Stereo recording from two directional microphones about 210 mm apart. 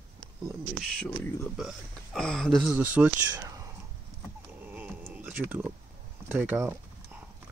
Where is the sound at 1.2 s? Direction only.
10° left (ahead or behind).